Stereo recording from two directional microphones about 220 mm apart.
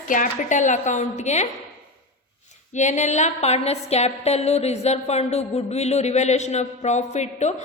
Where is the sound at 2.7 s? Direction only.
35° left (ahead or behind).